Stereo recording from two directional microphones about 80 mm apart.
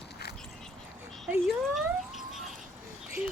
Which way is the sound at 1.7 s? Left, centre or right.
Centre.